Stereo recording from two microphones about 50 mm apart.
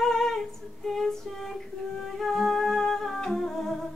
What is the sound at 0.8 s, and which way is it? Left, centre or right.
Female singing, centre.